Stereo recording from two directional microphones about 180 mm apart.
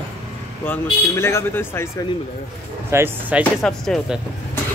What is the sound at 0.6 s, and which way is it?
A man's voice, 15° left (ahead or behind).